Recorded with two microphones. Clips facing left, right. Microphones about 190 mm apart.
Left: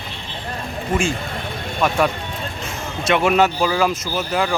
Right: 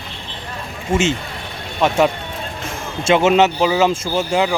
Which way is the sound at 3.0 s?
25° right (ahead or behind).